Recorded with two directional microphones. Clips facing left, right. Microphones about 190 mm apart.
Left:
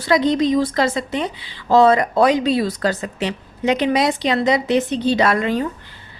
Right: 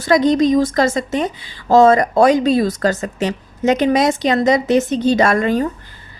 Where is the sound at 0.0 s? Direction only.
45° right (ahead or behind).